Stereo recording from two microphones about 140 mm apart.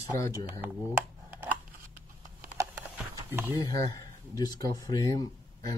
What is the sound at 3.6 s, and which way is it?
Speech, 25° left (ahead or behind).